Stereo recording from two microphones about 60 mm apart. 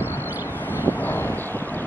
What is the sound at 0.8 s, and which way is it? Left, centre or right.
Vehicle, left.